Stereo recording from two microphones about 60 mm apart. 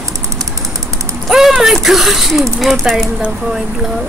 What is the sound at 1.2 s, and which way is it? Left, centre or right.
Speech, centre.